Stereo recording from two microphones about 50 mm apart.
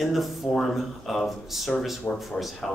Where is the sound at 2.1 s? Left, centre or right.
Left.